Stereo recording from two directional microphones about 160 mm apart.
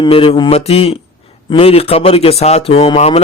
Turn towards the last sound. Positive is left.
turn(degrees=40)  # may be behind; listen again after turning